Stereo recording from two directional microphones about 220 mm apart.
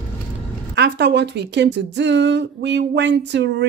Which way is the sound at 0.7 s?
50° right (ahead or behind).